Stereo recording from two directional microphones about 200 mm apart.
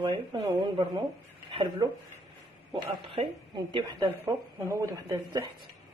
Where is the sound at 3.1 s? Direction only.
25° right (ahead or behind).